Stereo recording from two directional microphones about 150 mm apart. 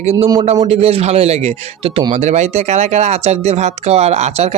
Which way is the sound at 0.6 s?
40° right (ahead or behind).